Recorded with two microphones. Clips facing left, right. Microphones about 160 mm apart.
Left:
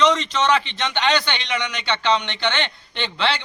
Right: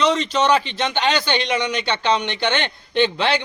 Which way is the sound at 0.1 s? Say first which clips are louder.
Right 2 dB; 40° right (ahead or behind).